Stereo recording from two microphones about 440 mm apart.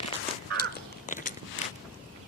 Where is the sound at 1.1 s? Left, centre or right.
Centre.